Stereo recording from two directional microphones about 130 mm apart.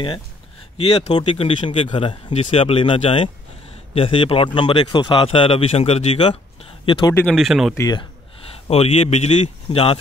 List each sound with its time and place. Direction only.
0.7 s a man's voice: 50° left (ahead or behind); by 7.2 s 35° left (ahead or behind)
7.3 s speech: centre (ahead or behind)
8.6 s a man's voice: 50° left (ahead or behind)